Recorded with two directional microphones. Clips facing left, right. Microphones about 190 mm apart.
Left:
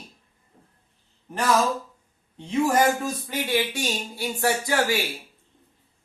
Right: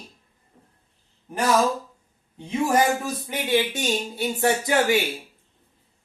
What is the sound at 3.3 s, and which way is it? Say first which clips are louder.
Speech: right 4 dB; 20° right (ahead or behind).